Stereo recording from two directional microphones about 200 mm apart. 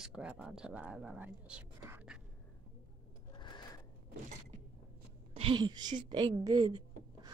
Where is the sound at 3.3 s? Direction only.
20° left (ahead or behind).